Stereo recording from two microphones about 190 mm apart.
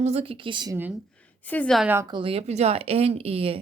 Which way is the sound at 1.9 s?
20° right (ahead or behind).